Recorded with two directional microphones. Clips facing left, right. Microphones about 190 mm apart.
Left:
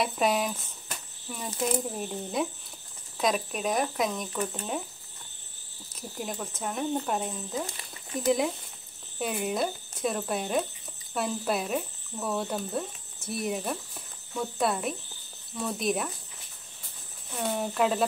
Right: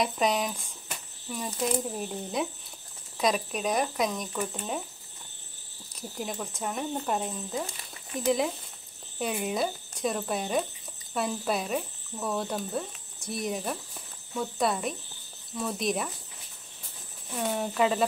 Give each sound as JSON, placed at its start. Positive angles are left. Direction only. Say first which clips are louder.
{"t": 0.0, "sound": "speech", "louder": "even", "side_deg": 5}
{"t": 5.9, "sound": "speech", "louder": "even", "side_deg": 0}
{"t": 17.4, "sound": "speech", "louder": "even", "side_deg": 0}